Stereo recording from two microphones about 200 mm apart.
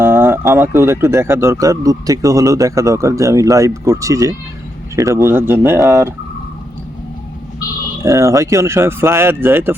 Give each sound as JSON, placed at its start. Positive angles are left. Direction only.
{"t": 0.0, "sound": "speech", "side_deg": -10}
{"t": 8.0, "sound": "speech", "side_deg": -15}